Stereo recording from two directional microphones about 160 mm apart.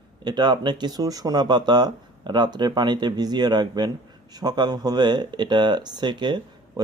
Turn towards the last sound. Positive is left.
turn(degrees=-30)  # may be behind; listen again after turning